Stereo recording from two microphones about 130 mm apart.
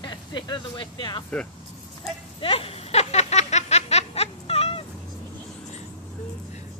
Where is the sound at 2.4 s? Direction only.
45° left (ahead or behind).